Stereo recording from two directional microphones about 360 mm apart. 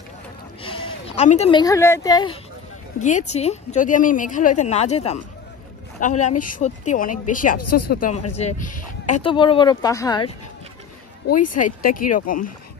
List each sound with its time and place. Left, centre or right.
0.6 s a woman's voice: centre
7.5 s speech: left
7.9 s a woman's voice: left
11.3 s a woman's voice: left
11.8 s speech: left
12.1 s a woman's voice: left